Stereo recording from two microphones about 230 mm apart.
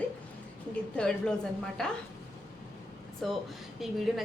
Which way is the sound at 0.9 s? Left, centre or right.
Centre.